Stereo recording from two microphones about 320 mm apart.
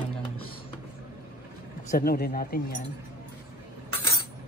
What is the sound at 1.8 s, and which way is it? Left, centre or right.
Speech, left.